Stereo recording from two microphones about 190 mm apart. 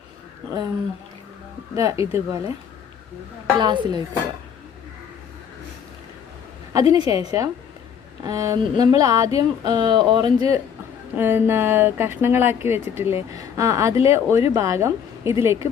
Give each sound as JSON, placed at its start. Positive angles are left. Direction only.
{"t": 1.8, "sound": "speech", "side_deg": -15}
{"t": 3.5, "sound": "speech", "side_deg": -25}
{"t": 6.7, "sound": "speech", "side_deg": -20}
{"t": 11.1, "sound": "speech", "side_deg": -10}